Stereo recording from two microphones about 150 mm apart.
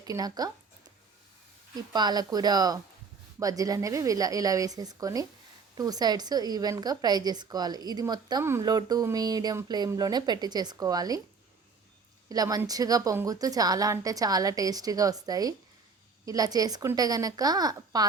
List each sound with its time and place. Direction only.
0.0 s a woman's voice: 25° right (ahead or behind)
1.7 s a woman's voice: 25° right (ahead or behind)
12.3 s a woman's voice: 25° right (ahead or behind)